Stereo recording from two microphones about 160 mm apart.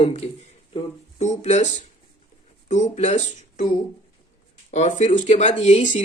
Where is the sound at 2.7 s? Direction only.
45° left (ahead or behind).